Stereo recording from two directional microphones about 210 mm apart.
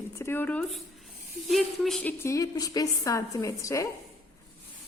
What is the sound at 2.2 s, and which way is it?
A woman's voice, 15° left (ahead or behind).